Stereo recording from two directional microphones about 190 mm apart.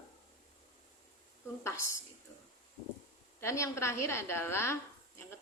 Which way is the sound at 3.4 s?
15° left (ahead or behind).